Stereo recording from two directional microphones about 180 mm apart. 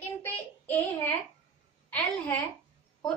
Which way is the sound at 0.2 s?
10° left (ahead or behind).